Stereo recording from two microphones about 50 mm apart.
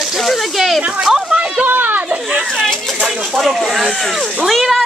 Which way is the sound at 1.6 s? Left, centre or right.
Right.